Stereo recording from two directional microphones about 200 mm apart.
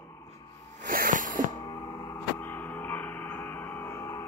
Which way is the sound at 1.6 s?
15° left (ahead or behind).